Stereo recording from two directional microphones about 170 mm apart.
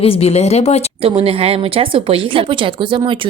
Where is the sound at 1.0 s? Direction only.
35° right (ahead or behind).